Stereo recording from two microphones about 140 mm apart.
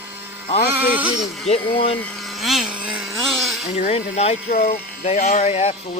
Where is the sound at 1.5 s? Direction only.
45° left (ahead or behind).